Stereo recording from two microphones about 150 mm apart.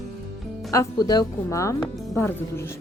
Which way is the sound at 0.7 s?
25° left (ahead or behind).